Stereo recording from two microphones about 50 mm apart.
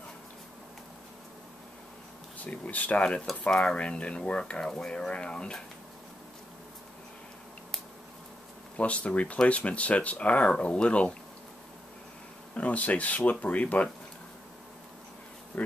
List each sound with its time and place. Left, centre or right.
2.3 s speech: left
3.4 s speech: centre
8.7 s speech: left
12.5 s speech: left
15.5 s speech: left